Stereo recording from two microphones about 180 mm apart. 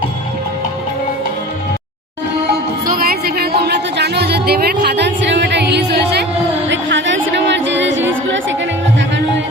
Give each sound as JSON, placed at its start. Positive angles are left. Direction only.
{"t": 2.8, "sound": "music", "side_deg": -55}
{"t": 6.7, "sound": "music", "side_deg": -90}